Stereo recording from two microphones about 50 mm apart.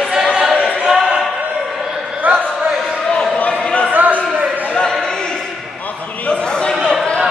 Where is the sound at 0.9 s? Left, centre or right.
Centre.